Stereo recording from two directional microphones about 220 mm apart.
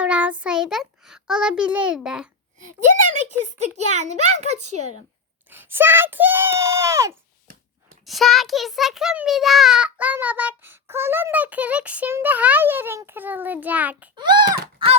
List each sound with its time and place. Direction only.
0.0 s a child's voice: 5° right (ahead or behind)
3.1 s a child's voice: 30° right (ahead or behind)
4.7 s a woman's voice: 90° right
5.5 s a child's voice: 10° right (ahead or behind)
8.0 s a child's voice: centre (ahead or behind)
14.2 s speech: 20° right (ahead or behind)